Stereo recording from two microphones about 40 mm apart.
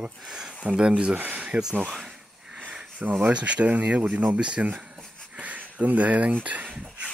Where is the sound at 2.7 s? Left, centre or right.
Right.